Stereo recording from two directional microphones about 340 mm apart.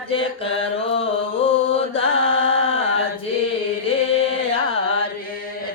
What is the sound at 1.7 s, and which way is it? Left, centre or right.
Mantra, centre.